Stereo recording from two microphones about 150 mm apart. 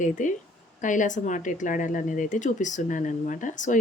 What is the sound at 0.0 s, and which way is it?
Speech, 55° left (ahead or behind).